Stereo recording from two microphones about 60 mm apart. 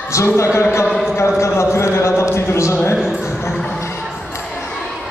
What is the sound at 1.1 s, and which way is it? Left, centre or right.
Speech, left.